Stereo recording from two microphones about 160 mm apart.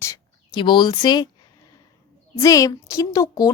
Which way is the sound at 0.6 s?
30° left (ahead or behind).